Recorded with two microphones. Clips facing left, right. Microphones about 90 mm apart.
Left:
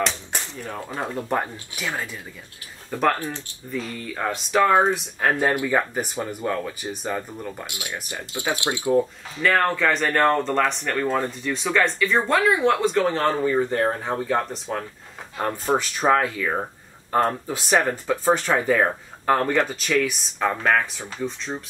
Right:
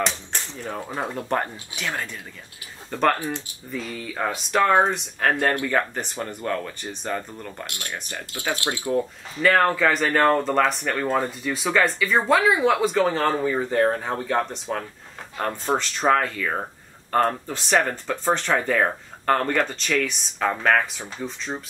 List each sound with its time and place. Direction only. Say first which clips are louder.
0.7 s speech: right 2 dB; 5° right (ahead or behind)
8.4 s speech: left 2 dB; 15° left (ahead or behind)
8.9 s speech: left 3 dB; centre (ahead or behind)